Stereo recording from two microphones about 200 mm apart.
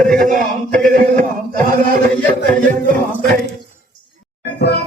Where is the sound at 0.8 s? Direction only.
40° right (ahead or behind).